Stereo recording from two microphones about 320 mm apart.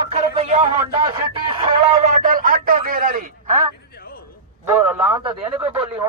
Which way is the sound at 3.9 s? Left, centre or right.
Left.